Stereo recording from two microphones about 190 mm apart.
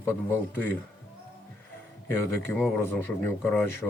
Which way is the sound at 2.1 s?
10° left (ahead or behind).